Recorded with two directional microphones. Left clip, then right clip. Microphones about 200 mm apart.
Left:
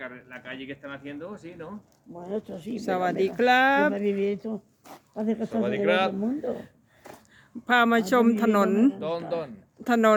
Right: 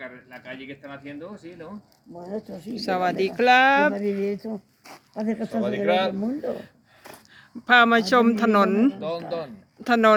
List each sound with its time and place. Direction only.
0.7 s speech: centre (ahead or behind)
5.1 s speech: 15° right (ahead or behind)
5.7 s speech: 30° right (ahead or behind)
6.6 s a sound: 5° right (ahead or behind)
7.7 s speech: centre (ahead or behind)